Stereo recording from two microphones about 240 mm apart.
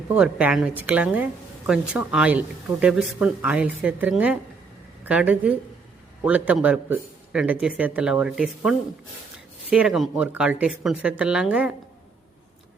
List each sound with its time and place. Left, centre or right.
0.1 s a woman's voice: centre